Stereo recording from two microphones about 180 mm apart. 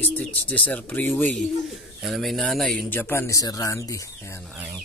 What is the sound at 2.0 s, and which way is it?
Speech, centre (ahead or behind).